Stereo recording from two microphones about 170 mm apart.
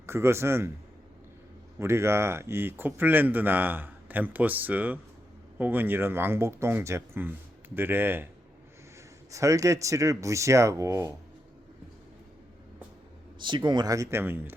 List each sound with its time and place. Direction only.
0.0 s speech: 15° right (ahead or behind)
1.8 s speech: 15° right (ahead or behind)
9.3 s speech: 20° right (ahead or behind)
13.4 s speech: 25° right (ahead or behind); by 14.5 s 10° right (ahead or behind)